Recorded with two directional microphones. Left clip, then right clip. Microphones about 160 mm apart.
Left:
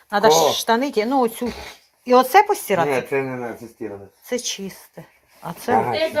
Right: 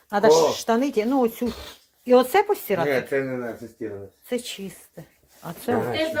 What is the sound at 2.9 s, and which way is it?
Speech, 30° left (ahead or behind).